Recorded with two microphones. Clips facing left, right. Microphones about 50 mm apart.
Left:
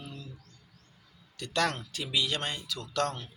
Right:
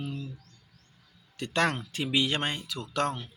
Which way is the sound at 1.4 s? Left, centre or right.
Right.